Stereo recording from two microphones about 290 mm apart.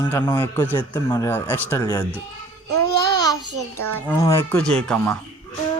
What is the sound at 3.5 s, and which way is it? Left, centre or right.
Child singing, right.